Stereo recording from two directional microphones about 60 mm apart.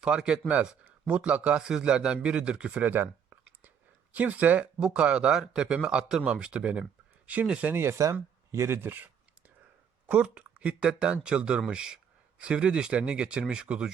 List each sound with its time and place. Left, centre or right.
0.0 s a man's voice: centre
2.9 s a sound: right
4.1 s a man's voice: right
7.6 s speech: right
7.9 s speech: right
10.1 s a man's voice: centre